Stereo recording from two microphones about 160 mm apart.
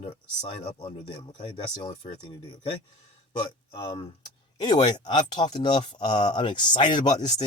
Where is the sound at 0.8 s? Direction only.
25° left (ahead or behind).